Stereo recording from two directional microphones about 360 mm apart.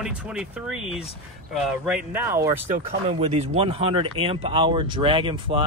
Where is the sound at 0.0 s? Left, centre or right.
Centre.